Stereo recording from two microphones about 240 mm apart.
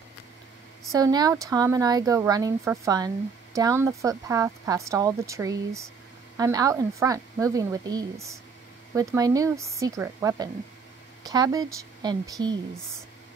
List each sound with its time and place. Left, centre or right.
0.9 s speech: centre